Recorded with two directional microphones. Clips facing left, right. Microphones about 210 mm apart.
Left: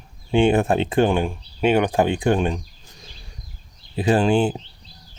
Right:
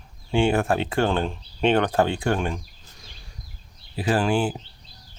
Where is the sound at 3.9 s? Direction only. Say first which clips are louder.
Left 4 dB; 20° left (ahead or behind).